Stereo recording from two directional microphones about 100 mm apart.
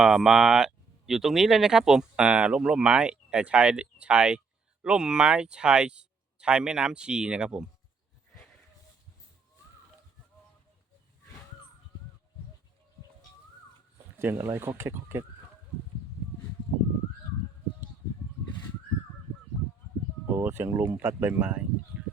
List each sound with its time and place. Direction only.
0.0 s speech: 5° right (ahead or behind)
14.3 s speech: 30° right (ahead or behind)
20.3 s speech: 25° right (ahead or behind)